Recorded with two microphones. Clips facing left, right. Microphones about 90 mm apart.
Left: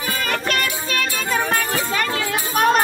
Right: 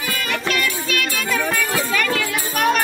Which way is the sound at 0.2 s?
40° left (ahead or behind).